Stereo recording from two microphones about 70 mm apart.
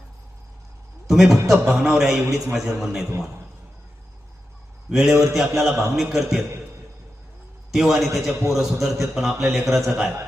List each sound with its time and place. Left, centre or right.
1.0 s a sound: centre
1.5 s a man's voice: centre
4.9 s a man's voice: centre
7.7 s a man's voice: centre